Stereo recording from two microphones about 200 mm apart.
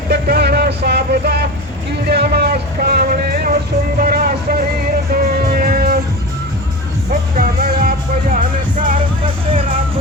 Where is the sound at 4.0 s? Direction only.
45° right (ahead or behind).